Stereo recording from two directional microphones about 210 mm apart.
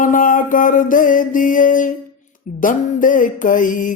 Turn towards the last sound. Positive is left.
turn(degrees=40)  # may be behind; listen again after turning